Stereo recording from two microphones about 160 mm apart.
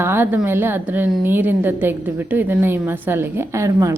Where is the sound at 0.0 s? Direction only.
15° right (ahead or behind).